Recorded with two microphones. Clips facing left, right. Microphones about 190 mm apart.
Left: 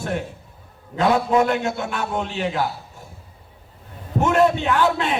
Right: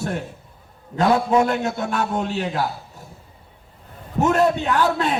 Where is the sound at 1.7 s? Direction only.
40° right (ahead or behind).